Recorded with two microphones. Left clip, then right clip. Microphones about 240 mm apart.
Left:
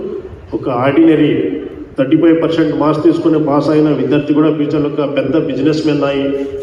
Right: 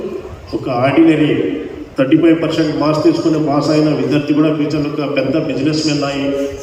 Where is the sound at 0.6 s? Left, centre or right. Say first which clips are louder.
Left 1 dB; left.